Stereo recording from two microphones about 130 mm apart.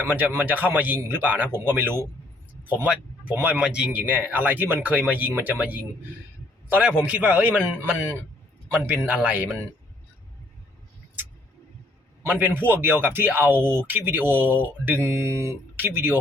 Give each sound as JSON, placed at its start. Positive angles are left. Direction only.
{"t": 0.0, "sound": "speech", "side_deg": -15}
{"t": 12.2, "sound": "speech", "side_deg": -15}